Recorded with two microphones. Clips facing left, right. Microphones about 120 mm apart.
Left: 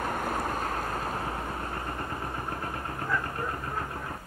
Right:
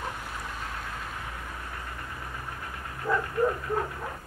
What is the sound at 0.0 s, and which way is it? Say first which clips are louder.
Vehicle: left 7 dB; 50° left (ahead or behind).